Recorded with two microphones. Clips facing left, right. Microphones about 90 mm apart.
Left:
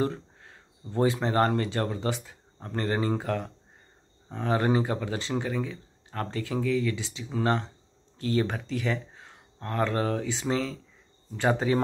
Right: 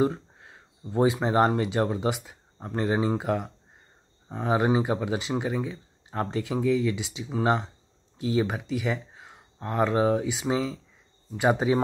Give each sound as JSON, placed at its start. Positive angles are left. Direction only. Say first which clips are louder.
{"t": 0.0, "sound": "speech", "louder": "right 4 dB", "side_deg": -15}